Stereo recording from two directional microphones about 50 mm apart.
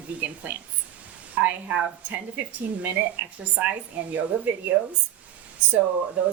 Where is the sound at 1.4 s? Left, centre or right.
Right.